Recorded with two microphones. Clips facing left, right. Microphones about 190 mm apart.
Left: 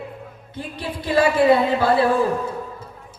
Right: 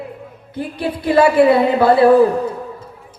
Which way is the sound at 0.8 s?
65° right (ahead or behind).